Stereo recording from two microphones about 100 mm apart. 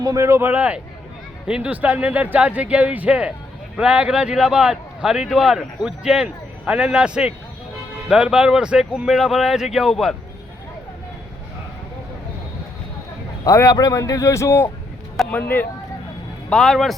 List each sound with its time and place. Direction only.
0.0 s speech: 30° right (ahead or behind)
0.5 s speech: 10° right (ahead or behind)
13.4 s a man's voice: 35° left (ahead or behind); by 15.6 s 20° left (ahead or behind)
16.5 s speech: 5° left (ahead or behind)